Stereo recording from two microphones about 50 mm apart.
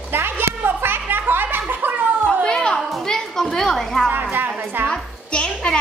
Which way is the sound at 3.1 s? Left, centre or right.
Centre.